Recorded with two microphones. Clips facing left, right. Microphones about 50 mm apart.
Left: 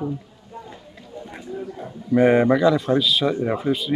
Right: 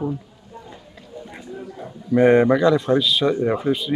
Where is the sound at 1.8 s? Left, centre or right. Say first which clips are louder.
Right 1 dB; centre.